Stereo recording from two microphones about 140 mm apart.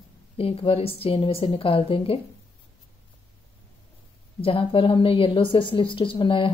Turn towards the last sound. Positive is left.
turn(degrees=35)  # may be behind; listen again after turning